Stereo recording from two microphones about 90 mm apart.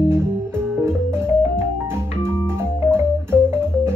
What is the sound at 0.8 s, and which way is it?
Organ, 30° right (ahead or behind).